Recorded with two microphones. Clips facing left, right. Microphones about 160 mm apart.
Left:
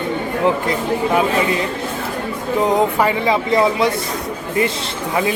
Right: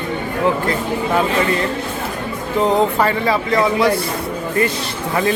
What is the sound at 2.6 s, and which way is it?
Speech, 10° left (ahead or behind).